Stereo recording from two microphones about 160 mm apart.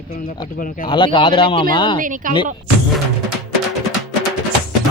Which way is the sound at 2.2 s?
55° right (ahead or behind).